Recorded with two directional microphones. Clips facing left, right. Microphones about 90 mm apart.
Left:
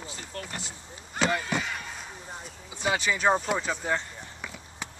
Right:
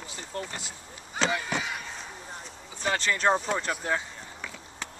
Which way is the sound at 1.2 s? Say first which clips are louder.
Left 2 dB; centre (ahead or behind).